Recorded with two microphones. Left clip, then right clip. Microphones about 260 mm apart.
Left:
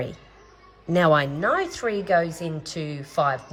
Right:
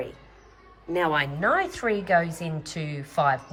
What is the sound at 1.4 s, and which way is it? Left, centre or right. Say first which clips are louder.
A woman's voice: even; centre.